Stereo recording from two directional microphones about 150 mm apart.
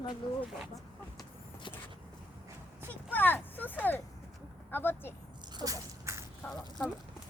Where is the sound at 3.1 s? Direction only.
10° left (ahead or behind).